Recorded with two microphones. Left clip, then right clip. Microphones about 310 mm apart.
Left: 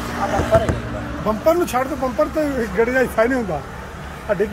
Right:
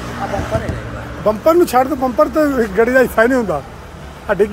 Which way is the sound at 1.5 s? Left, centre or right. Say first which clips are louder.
Right 6 dB; centre.